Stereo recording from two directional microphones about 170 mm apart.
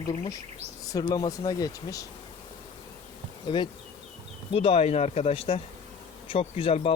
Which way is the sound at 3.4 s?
30° left (ahead or behind).